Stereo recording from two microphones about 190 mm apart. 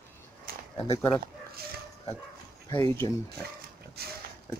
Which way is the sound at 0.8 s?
30° left (ahead or behind).